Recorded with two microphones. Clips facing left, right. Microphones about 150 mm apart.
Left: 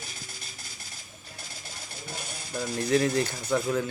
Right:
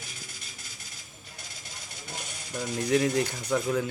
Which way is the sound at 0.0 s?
35° left (ahead or behind).